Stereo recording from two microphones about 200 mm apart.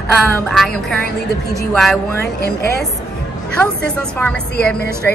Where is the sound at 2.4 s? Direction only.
50° left (ahead or behind).